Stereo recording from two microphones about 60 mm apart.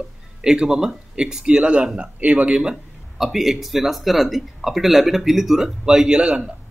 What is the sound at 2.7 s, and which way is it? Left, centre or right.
Speech, centre.